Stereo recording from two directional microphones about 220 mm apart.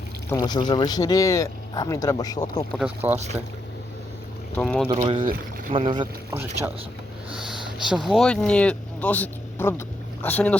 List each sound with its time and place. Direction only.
0.3 s speech: 15° left (ahead or behind)
2.7 s speech: 5° right (ahead or behind)
4.6 s speech: 5° left (ahead or behind)
4.9 s speech: 25° right (ahead or behind)
5.8 s speech: 20° right (ahead or behind)
6.3 s speech: 10° right (ahead or behind); by 10.6 s 5° left (ahead or behind)